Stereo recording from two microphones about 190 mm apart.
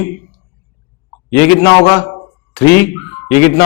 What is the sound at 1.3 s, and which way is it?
Speech, 10° left (ahead or behind).